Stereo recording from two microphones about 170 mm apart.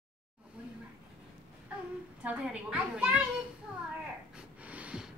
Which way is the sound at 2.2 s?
5° right (ahead or behind).